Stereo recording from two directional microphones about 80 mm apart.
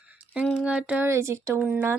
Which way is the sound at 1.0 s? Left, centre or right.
Right.